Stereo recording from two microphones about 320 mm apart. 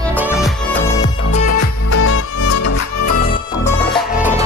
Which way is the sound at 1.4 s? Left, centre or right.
Left.